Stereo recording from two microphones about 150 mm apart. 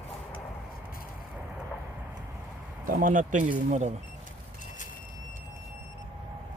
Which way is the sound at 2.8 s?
65° right (ahead or behind).